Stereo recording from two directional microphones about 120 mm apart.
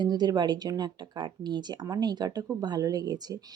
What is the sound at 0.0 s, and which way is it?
Speech, 35° right (ahead or behind).